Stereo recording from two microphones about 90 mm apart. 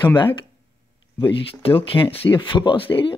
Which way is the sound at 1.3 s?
90° left.